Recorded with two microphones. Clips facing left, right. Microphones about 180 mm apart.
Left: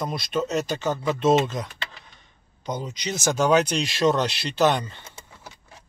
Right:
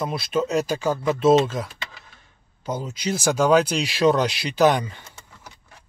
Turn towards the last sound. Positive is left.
turn(degrees=-10)  # may be behind; listen again after turning